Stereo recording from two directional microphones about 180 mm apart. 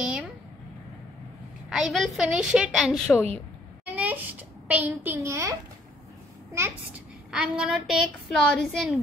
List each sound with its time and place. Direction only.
0.0 s a sound: 5° right (ahead or behind)
1.7 s a woman's voice: centre (ahead or behind); by 5.6 s 15° right (ahead or behind)
7.2 s a woman's voice: 5° right (ahead or behind)